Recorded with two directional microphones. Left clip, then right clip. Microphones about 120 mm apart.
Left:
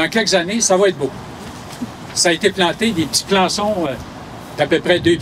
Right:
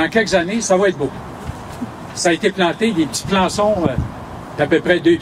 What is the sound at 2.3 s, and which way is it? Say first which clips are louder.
Speech: even; 45° left (ahead or behind).